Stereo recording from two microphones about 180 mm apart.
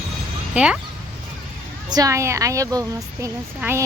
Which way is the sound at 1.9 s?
20° right (ahead or behind).